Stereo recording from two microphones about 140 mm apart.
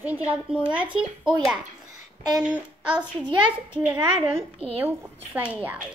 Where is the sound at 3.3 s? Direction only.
40° right (ahead or behind).